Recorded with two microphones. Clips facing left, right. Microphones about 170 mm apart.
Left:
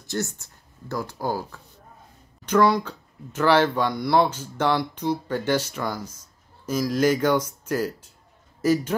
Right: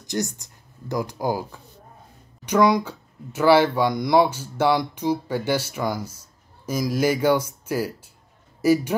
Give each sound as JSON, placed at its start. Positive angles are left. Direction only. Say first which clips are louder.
{"t": 0.0, "sound": "a man's voice", "louder": "right 2 dB", "side_deg": -15}